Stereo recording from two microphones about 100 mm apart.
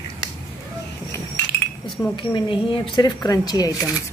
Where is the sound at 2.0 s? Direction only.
30° left (ahead or behind).